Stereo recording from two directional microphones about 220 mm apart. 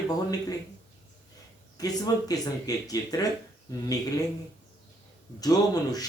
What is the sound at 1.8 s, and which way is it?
Speech, 15° left (ahead or behind).